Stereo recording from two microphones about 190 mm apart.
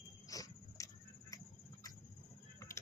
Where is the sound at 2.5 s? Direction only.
15° left (ahead or behind).